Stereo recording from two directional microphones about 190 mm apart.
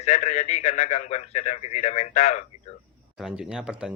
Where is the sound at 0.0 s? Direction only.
40° left (ahead or behind).